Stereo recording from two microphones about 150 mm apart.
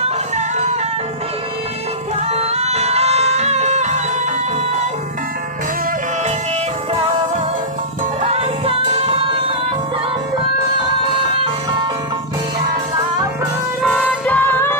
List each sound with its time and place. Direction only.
2.3 s music: 45° right (ahead or behind)
8.2 s music: 45° right (ahead or behind)
13.8 s music: 5° left (ahead or behind)